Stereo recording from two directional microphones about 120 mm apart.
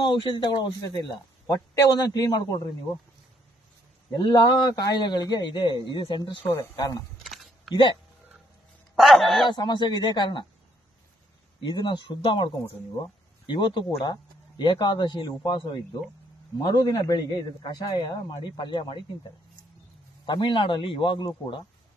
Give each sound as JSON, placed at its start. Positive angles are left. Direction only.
{"t": 0.0, "sound": "a man's voice", "side_deg": 40}
{"t": 4.2, "sound": "a man's voice", "side_deg": 35}
{"t": 6.5, "sound": "speech", "side_deg": 30}
{"t": 7.2, "sound": "a sound", "side_deg": 0}
{"t": 8.9, "sound": "a man's voice", "side_deg": 0}
{"t": 9.5, "sound": "a man's voice", "side_deg": 40}
{"t": 11.6, "sound": "a man's voice", "side_deg": 40}
{"t": 20.2, "sound": "a man's voice", "side_deg": 40}